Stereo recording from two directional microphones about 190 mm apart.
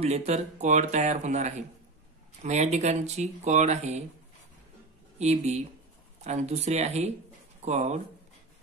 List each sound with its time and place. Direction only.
0.0 s speech: 35° right (ahead or behind)
5.2 s speech: 35° right (ahead or behind)